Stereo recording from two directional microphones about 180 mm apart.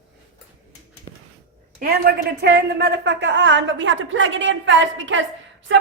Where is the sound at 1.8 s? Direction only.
60° right (ahead or behind); by 5.2 s 90° right.